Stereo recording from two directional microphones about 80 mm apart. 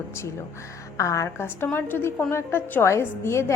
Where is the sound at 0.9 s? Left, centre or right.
Left.